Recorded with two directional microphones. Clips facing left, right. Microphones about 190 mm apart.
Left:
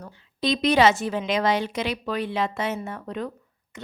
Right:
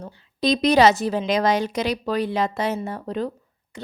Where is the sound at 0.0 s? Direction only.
35° right (ahead or behind).